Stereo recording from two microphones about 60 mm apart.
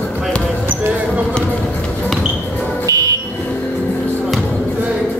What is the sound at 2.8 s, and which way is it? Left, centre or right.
Smoke detector, right.